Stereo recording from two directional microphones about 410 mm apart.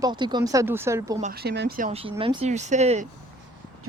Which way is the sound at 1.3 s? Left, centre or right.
Right.